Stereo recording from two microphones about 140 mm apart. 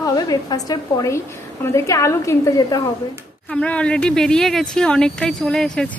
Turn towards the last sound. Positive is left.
turn(degrees=5)  # may be behind; listen again after turning